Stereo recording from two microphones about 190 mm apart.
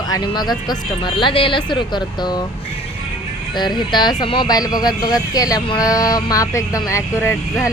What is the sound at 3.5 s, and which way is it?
Speech, 25° left (ahead or behind).